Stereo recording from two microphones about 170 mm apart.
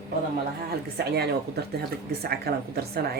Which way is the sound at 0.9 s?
70° right (ahead or behind).